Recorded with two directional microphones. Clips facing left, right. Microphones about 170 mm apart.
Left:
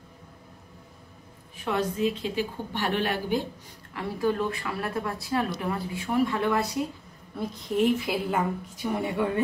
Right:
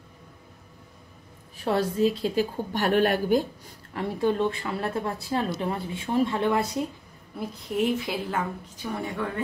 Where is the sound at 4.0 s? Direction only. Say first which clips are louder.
Right 2 dB; 25° right (ahead or behind).